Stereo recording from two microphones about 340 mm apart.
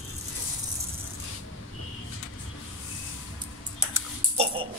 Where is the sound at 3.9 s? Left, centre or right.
Centre.